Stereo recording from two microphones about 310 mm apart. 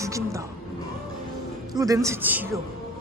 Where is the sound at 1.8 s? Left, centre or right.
Centre.